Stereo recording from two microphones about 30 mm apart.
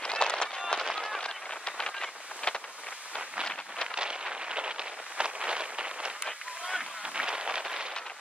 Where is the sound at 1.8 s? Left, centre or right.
Left.